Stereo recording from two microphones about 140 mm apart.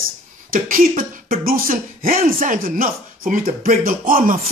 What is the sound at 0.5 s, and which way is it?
Speech, 80° right.